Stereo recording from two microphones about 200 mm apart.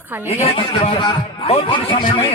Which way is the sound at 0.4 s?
25° left (ahead or behind).